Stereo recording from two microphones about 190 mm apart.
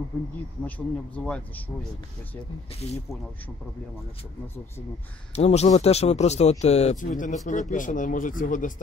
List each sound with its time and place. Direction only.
0.7 s speech: 10° left (ahead or behind)
2.7 s speech: 35° left (ahead or behind)
5.3 s speech: 35° left (ahead or behind)